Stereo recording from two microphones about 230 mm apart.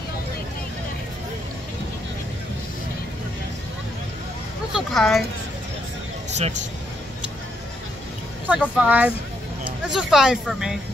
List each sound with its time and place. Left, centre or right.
4.7 s speech: centre
6.3 s speech: right
8.5 s speech: centre